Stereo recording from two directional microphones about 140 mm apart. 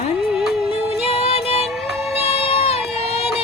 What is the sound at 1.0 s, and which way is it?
Music, 45° left (ahead or behind).